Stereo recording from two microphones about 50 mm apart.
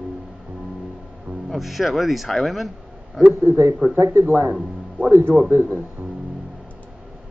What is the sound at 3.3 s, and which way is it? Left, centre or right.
Speech, right.